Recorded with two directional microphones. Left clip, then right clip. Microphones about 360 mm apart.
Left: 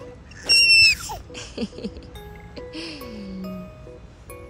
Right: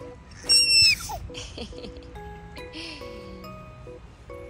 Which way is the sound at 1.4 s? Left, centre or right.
Left.